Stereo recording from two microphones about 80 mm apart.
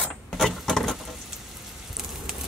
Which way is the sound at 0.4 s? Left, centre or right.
Centre.